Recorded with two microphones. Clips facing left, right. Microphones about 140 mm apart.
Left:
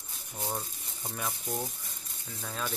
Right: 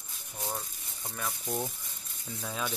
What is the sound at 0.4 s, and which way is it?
Speech, 25° left (ahead or behind).